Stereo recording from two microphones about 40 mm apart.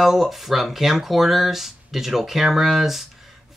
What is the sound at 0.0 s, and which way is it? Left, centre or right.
Speech, centre.